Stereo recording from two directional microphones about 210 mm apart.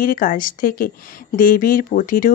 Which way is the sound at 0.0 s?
40° left (ahead or behind).